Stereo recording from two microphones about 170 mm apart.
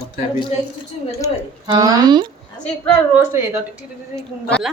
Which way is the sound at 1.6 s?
25° right (ahead or behind).